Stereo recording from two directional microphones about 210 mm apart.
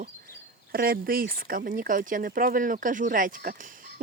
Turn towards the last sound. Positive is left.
turn(degrees=-40)  # may be behind; listen again after turning